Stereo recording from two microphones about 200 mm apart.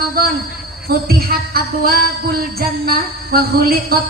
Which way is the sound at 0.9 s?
50° right (ahead or behind).